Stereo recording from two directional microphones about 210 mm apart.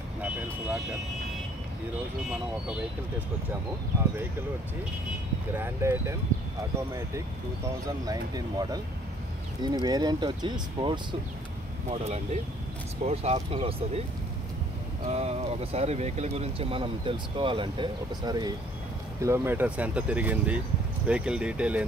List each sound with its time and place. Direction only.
5.5 s speech: 10° right (ahead or behind)
7.8 s speech: 15° right (ahead or behind)
15.0 s speech: 30° right (ahead or behind); by 21.8 s 5° right (ahead or behind)